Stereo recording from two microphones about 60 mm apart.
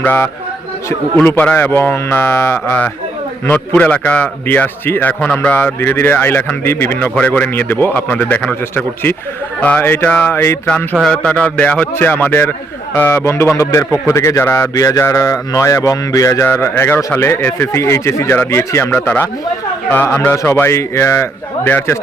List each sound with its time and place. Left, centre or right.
1.1 s a man's voice: left
3.5 s a man's voice: left
4.4 s a man's voice: left
5.5 s a man's voice: left
7.2 s a man's voice: left
10.1 s a man's voice: left
10.3 s speech: left
11.1 s a man's voice: centre
11.9 s a man's voice: left
13.2 s speech: left
14.8 s a sound: left
16.6 s speech: left
19.9 s a man's voice: left
20.3 s speech: left